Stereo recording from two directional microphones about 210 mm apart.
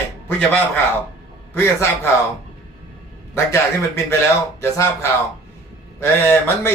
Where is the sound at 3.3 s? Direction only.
15° left (ahead or behind).